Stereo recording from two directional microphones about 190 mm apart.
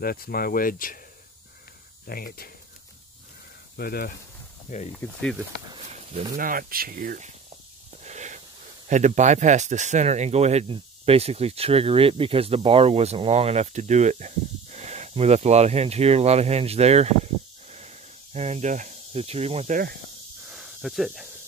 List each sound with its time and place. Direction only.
0.0 s speech: 50° left (ahead or behind)
2.0 s speech: 50° left (ahead or behind)
3.7 s speech: 55° left (ahead or behind)
5.0 s speech: 10° left (ahead or behind)
5.7 s a sound: 35° right (ahead or behind)
6.3 s speech: 50° right (ahead or behind)
8.0 s wheeze: 35° right (ahead or behind)
8.8 s speech: 40° right (ahead or behind)
17.6 s snake: 35° right (ahead or behind)
20.4 s snake: centre (ahead or behind)